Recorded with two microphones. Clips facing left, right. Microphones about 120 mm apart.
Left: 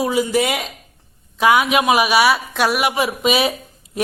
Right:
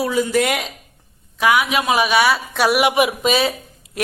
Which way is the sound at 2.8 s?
20° right (ahead or behind).